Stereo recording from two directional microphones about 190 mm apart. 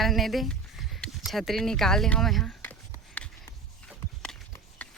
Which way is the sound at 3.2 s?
5° left (ahead or behind).